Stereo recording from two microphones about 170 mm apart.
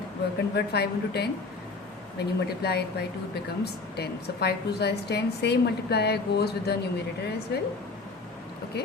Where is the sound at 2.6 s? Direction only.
70° left (ahead or behind).